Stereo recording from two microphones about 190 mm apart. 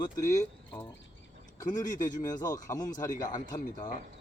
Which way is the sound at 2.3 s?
20° left (ahead or behind).